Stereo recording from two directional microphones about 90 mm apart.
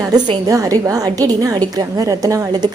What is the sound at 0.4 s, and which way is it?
A woman's voice, 40° right (ahead or behind).